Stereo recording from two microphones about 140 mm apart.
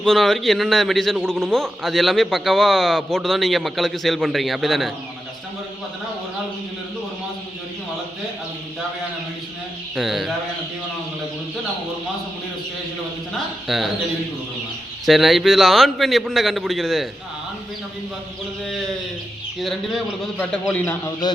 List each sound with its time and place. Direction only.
0.0 s a man's voice: 5° left (ahead or behind)
9.9 s a man's voice: centre (ahead or behind)
13.7 s a man's voice: centre (ahead or behind)
15.0 s a man's voice: centre (ahead or behind)
19.5 s a man's voice: centre (ahead or behind)
20.7 s speech: 15° left (ahead or behind)